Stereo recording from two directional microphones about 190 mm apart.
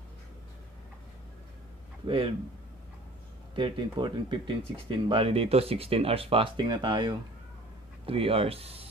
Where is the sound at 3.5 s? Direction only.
25° right (ahead or behind).